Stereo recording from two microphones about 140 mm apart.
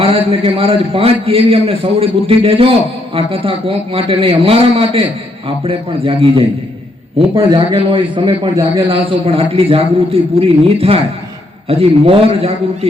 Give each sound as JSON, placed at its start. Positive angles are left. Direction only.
{"t": 0.0, "sound": "a man's voice", "side_deg": -45}